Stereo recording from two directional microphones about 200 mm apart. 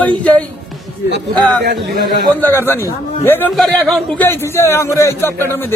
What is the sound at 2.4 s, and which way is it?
A man's voice, 10° left (ahead or behind).